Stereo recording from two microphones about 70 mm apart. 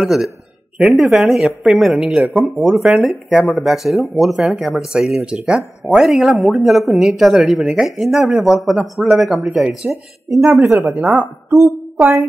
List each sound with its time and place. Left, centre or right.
0.0 s speech: centre
10.6 s a woman's voice: right